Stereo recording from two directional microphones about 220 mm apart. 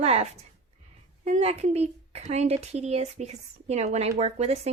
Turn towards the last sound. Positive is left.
turn(degrees=-30)  # may be behind; listen again after turning